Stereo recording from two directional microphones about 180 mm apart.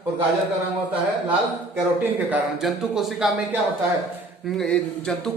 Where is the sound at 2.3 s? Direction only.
Centre (ahead or behind).